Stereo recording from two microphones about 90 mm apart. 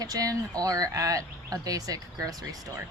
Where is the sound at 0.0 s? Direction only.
40° right (ahead or behind).